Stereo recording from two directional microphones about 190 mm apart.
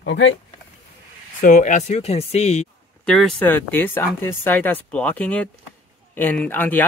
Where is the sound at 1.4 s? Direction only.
40° left (ahead or behind).